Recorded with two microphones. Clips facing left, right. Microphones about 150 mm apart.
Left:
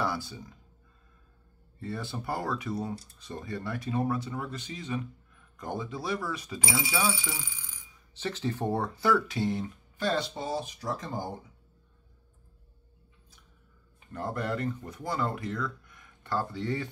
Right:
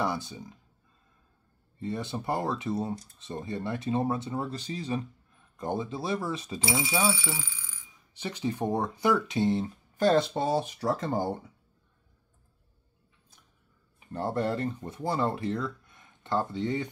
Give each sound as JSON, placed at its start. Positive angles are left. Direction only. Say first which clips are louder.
{"t": 0.0, "sound": "speech", "louder": "right 1 dB", "side_deg": -20}
{"t": 1.8, "sound": "speech", "louder": "right 3 dB", "side_deg": -20}
{"t": 7.3, "sound": "speech", "louder": "right 2 dB", "side_deg": 15}
{"t": 8.1, "sound": "speech", "louder": "even", "side_deg": -15}
{"t": 9.9, "sound": "speech", "louder": "right 7 dB", "side_deg": -50}
{"t": 14.1, "sound": "speech", "louder": "right 3 dB", "side_deg": -30}